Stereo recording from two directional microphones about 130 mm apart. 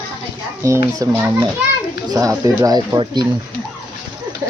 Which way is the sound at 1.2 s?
15° right (ahead or behind).